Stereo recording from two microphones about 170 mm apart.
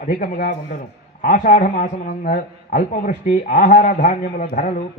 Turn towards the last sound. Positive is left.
turn(degrees=50)  # may be behind; listen again after turning